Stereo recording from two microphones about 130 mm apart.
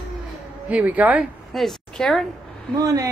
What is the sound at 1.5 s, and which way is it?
Speech, centre (ahead or behind).